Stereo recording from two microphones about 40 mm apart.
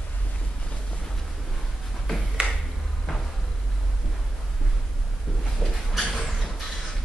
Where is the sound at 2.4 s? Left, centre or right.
Right.